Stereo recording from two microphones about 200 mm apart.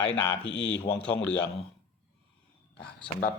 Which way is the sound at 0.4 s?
65° left (ahead or behind).